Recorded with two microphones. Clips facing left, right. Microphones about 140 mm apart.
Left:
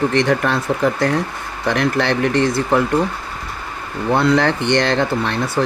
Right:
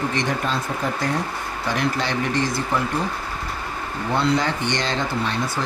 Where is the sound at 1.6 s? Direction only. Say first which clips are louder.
Left 6 dB; 65° left (ahead or behind).